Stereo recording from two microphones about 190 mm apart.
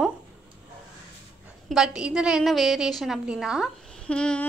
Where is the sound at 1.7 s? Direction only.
5° right (ahead or behind).